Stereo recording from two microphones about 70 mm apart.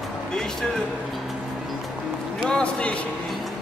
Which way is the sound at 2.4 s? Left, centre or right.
Centre.